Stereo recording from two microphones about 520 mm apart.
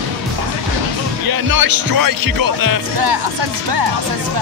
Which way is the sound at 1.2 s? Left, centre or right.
Right.